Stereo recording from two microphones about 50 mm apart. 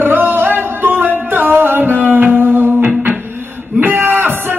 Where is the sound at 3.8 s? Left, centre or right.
Right.